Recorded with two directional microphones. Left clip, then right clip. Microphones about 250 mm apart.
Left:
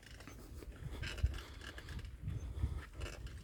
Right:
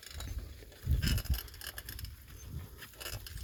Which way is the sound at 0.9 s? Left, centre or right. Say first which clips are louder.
Right 8 dB; right.